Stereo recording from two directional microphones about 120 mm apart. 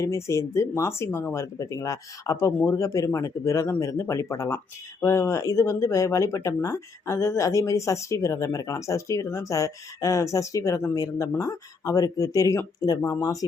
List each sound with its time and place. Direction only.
0.0 s speech: 25° left (ahead or behind)